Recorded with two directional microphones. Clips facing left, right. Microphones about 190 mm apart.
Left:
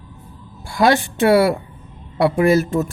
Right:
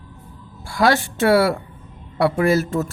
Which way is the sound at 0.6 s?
15° left (ahead or behind).